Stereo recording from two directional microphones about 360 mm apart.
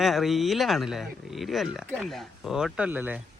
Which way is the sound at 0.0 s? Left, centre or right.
Centre.